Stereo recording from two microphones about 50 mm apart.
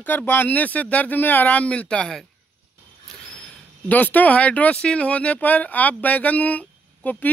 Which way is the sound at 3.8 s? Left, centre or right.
Left.